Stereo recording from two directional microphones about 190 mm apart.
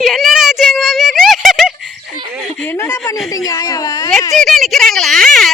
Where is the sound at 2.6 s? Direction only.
15° left (ahead or behind).